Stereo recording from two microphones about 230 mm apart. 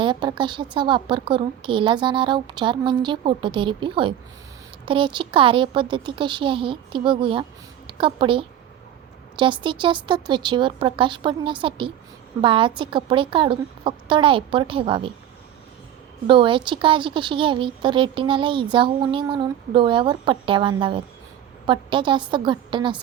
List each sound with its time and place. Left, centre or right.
0.0 s a woman's voice: centre
16.2 s speech: right